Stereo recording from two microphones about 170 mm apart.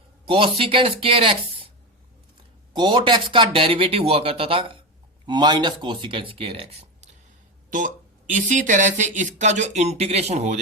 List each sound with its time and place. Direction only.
0.3 s speech: 30° right (ahead or behind)
2.7 s speech: 30° right (ahead or behind)
7.7 s speech: 50° right (ahead or behind)